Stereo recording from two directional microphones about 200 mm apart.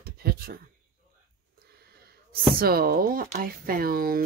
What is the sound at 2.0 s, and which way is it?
Speech, 50° right (ahead or behind).